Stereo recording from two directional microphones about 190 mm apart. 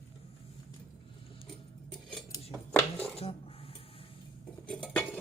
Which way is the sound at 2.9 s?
30° left (ahead or behind).